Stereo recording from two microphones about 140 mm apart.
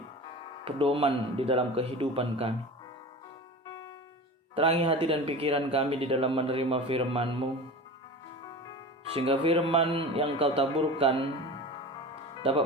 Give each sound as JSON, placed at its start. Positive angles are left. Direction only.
{"t": 0.6, "sound": "speech", "side_deg": -40}
{"t": 4.5, "sound": "speech", "side_deg": -45}
{"t": 9.1, "sound": "speech", "side_deg": -45}
{"t": 12.4, "sound": "speech", "side_deg": -40}